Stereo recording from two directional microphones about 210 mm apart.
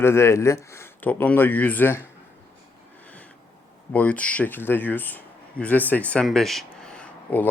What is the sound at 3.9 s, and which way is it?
Speech, 5° left (ahead or behind).